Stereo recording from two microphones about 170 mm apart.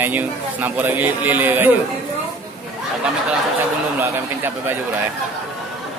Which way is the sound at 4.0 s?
15° right (ahead or behind).